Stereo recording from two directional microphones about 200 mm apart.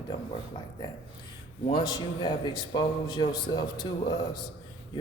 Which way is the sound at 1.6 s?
25° left (ahead or behind).